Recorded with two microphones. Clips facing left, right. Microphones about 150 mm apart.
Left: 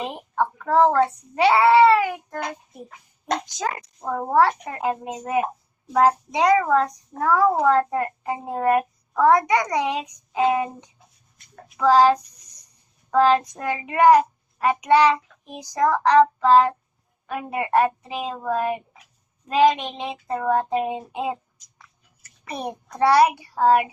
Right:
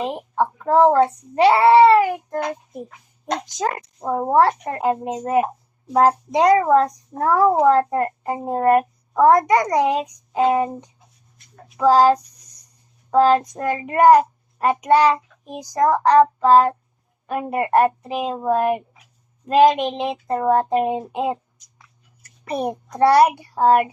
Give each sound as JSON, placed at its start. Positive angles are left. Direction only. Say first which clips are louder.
{"t": 0.0, "sound": "a child's voice", "louder": "right 3 dB", "side_deg": -30}
{"t": 3.6, "sound": "a child's voice", "louder": "right 4 dB", "side_deg": -35}
{"t": 4.4, "sound": "a child's voice", "louder": "right 1 dB", "side_deg": -45}
{"t": 11.8, "sound": "a child's voice", "louder": "right 2 dB", "side_deg": -40}
{"t": 22.4, "sound": "a child's voice", "louder": "right 6 dB", "side_deg": -45}